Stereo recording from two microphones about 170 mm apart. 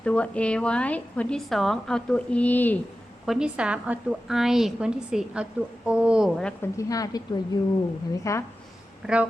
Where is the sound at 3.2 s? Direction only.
5° right (ahead or behind).